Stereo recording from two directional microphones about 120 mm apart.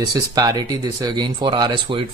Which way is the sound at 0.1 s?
30° right (ahead or behind).